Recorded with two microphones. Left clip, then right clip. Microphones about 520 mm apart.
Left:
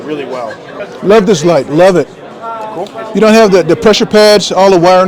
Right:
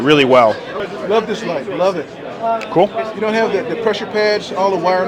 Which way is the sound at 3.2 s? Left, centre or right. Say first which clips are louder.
Left 12 dB; left.